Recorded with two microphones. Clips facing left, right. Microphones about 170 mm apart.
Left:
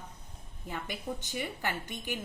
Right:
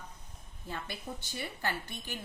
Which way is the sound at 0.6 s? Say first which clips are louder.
Left 3 dB; 15° left (ahead or behind).